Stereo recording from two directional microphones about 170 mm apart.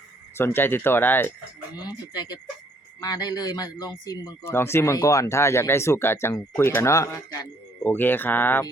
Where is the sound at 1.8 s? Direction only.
25° left (ahead or behind).